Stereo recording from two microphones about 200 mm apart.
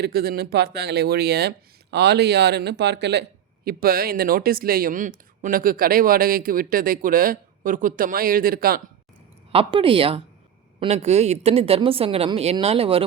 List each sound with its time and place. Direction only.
0.0 s speech: 50° right (ahead or behind)
9.5 s a woman's voice: 25° right (ahead or behind)